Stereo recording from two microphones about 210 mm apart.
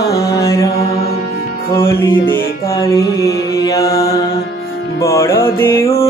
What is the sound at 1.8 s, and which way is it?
Music, 15° left (ahead or behind).